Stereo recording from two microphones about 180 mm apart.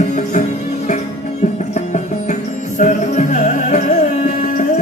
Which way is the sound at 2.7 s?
40° left (ahead or behind).